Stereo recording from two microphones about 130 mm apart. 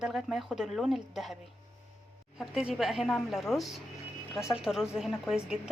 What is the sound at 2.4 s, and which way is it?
Speech, 5° right (ahead or behind).